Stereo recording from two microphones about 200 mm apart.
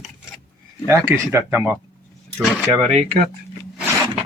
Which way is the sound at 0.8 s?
15° right (ahead or behind).